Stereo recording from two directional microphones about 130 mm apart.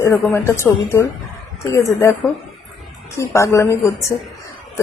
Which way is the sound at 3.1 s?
20° left (ahead or behind).